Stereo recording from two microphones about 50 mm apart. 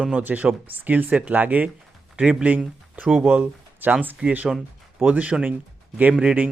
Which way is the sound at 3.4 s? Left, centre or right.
Right.